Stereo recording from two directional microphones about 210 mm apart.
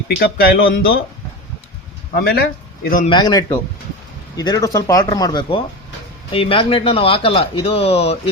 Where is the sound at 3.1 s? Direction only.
20° left (ahead or behind).